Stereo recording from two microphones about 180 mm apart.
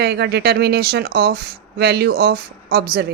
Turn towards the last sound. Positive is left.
turn(degrees=-60)  # may be behind; listen again after turning